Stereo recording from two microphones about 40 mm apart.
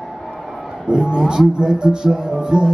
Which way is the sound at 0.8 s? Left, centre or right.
Right.